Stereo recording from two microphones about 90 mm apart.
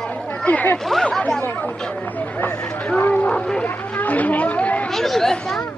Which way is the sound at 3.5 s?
15° left (ahead or behind).